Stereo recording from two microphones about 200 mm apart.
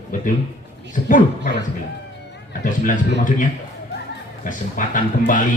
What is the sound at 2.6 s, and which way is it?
Speech, 40° left (ahead or behind).